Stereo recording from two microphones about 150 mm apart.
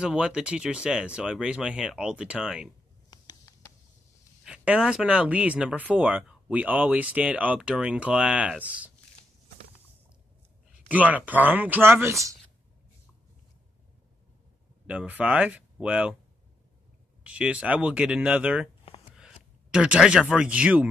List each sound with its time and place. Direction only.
0.0 s speech: 5° right (ahead or behind)
3.1 s a sound: 25° left (ahead or behind)
4.5 s speech: 5° right (ahead or behind)
10.9 s speech: 10° right (ahead or behind)
14.9 s speech: 10° right (ahead or behind)
17.2 s speech: 10° right (ahead or behind)